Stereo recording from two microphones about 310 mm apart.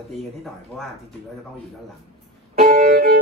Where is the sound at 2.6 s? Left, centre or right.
Right.